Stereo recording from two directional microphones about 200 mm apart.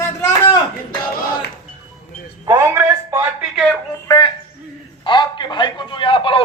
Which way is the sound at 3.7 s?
15° left (ahead or behind).